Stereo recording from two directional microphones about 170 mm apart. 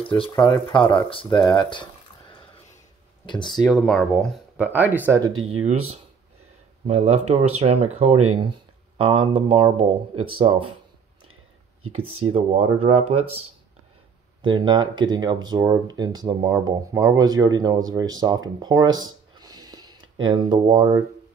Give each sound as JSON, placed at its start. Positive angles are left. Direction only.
{"t": 0.2, "sound": "speech", "side_deg": 25}
{"t": 3.4, "sound": "speech", "side_deg": 0}
{"t": 4.7, "sound": "speech", "side_deg": -10}
{"t": 5.6, "sound": "speech", "side_deg": -40}
{"t": 11.9, "sound": "speech", "side_deg": -35}
{"t": 14.4, "sound": "speech", "side_deg": -25}